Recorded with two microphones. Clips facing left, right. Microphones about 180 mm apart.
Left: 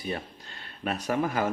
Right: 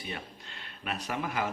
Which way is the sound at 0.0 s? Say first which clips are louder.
Left 6 dB; 40° left (ahead or behind).